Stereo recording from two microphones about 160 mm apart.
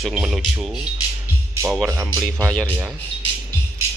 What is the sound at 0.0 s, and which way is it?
Speech, 5° right (ahead or behind).